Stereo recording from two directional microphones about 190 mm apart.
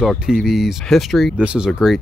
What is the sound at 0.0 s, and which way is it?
Speech, centre (ahead or behind).